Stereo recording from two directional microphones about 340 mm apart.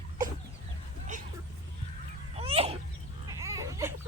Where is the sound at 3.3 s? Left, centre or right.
Centre.